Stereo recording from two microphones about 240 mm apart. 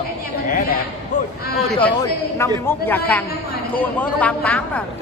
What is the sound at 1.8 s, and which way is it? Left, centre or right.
Speech, centre.